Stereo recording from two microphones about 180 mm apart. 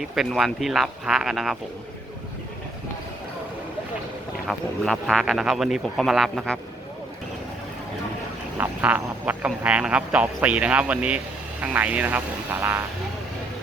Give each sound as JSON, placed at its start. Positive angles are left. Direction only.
{"t": 0.0, "sound": "speech", "side_deg": 0}
{"t": 4.4, "sound": "speech", "side_deg": 0}
{"t": 8.5, "sound": "speech", "side_deg": -10}